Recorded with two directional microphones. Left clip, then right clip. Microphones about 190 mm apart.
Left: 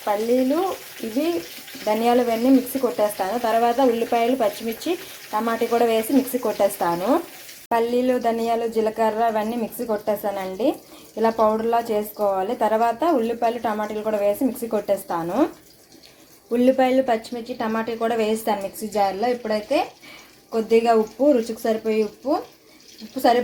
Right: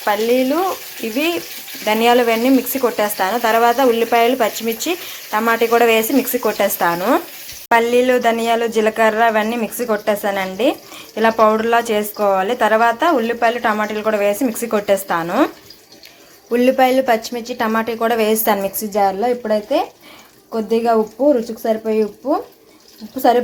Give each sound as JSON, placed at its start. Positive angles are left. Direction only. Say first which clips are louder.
{"t": 0.0, "sound": "speech", "louder": "right 5 dB", "side_deg": -5}
{"t": 12.1, "sound": "a woman's voice", "louder": "right 7 dB", "side_deg": -20}
{"t": 12.4, "sound": "speech", "louder": "right 6 dB", "side_deg": 0}
{"t": 16.5, "sound": "speech", "louder": "right 5 dB", "side_deg": 0}